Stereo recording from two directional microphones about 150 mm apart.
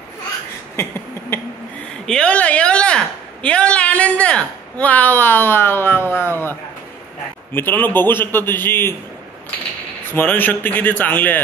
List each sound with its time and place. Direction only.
0.7 s a sound: 15° left (ahead or behind)
2.0 s speech: 5° left (ahead or behind)
7.5 s speech: 15° left (ahead or behind)
10.1 s speech: 15° left (ahead or behind)